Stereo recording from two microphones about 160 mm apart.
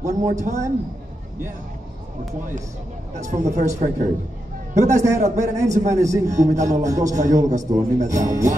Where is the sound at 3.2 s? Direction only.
50° right (ahead or behind).